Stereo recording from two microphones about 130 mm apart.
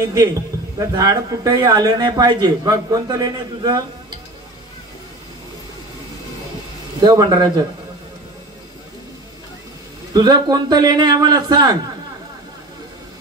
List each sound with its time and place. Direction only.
0.7 s a man's voice: 25° right (ahead or behind)
7.0 s a man's voice: 30° right (ahead or behind)
10.1 s a man's voice: 30° right (ahead or behind)